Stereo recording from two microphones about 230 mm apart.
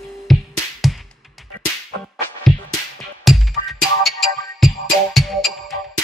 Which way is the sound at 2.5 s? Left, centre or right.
Centre.